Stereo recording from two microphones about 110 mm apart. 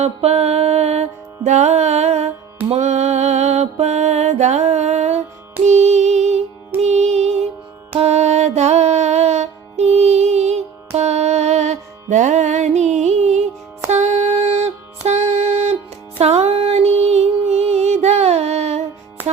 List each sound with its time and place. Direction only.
0.0 s mantra: 75° right (ahead or behind)
1.5 s music: 90° right